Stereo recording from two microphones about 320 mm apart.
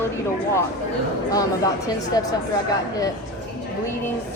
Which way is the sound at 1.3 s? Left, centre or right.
Centre.